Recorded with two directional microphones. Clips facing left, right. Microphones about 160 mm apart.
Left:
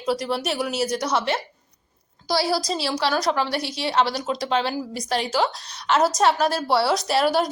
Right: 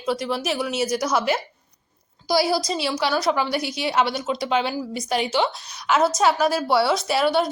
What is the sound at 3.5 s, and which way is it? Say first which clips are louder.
Speech: right 1 dB; 30° left (ahead or behind).